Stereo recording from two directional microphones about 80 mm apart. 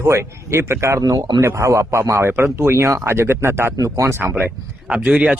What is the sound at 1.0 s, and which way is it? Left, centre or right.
Speech, right.